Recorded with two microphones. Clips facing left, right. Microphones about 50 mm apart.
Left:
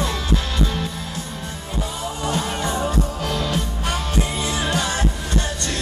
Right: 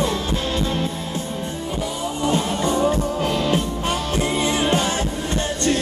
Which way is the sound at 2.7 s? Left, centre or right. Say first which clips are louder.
Right 4 dB; right.